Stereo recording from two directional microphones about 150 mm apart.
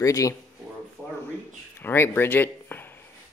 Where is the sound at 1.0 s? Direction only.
10° left (ahead or behind).